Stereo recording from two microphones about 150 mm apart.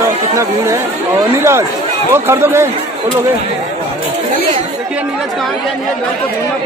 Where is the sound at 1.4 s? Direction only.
15° right (ahead or behind).